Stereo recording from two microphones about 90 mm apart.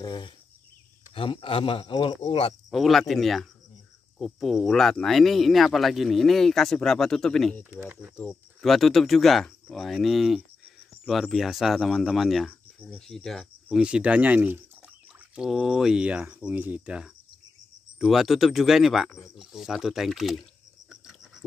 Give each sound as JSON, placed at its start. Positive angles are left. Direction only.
{"t": 0.0, "sound": "a sound", "side_deg": 60}
{"t": 1.1, "sound": "speech", "side_deg": 75}
{"t": 2.7, "sound": "speech", "side_deg": 0}
{"t": 7.7, "sound": "speech", "side_deg": -20}
{"t": 8.5, "sound": "speech", "side_deg": 0}
{"t": 13.7, "sound": "speech", "side_deg": -10}
{"t": 15.3, "sound": "speech", "side_deg": -5}
{"t": 19.0, "sound": "speech", "side_deg": 30}
{"t": 19.3, "sound": "speech", "side_deg": -5}
{"t": 20.9, "sound": "a sound", "side_deg": -5}